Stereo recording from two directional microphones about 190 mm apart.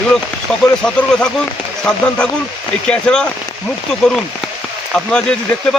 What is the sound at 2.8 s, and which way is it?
Speech, 5° left (ahead or behind).